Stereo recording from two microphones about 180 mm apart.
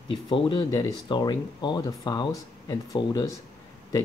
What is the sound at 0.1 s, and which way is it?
Speech, 25° left (ahead or behind).